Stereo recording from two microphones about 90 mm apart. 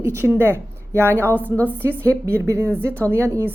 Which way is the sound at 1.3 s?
20° left (ahead or behind).